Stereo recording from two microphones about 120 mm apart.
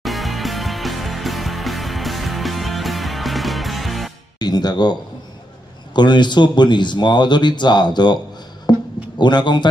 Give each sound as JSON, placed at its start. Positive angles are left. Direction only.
{"t": 0.0, "sound": "music", "side_deg": 0}
{"t": 4.4, "sound": "speech", "side_deg": 35}
{"t": 5.9, "sound": "speech", "side_deg": 40}
{"t": 8.7, "sound": "a sound", "side_deg": 35}
{"t": 9.2, "sound": "speech", "side_deg": 40}